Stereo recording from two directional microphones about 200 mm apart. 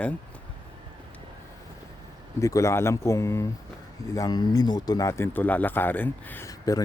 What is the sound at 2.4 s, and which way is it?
Speech, 15° left (ahead or behind).